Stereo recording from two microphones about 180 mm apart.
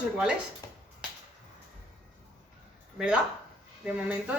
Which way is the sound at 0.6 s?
20° left (ahead or behind).